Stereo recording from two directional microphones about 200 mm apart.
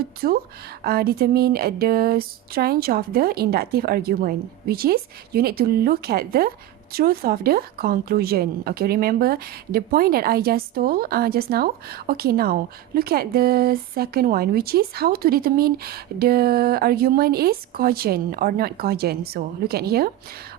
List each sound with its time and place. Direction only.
0.2 s speech: 50° right (ahead or behind)